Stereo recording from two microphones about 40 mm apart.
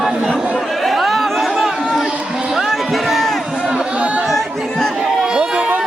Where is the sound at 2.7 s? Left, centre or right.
Centre.